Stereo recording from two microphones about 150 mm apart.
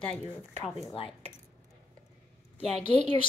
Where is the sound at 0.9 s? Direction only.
40° left (ahead or behind).